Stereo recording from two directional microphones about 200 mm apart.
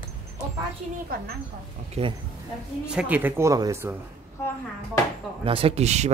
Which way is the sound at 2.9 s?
5° right (ahead or behind).